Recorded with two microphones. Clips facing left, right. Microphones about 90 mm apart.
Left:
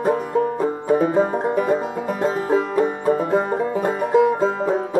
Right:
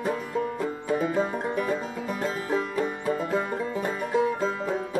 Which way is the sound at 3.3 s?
30° left (ahead or behind).